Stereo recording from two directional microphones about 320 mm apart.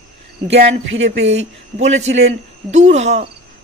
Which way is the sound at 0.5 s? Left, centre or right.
Right.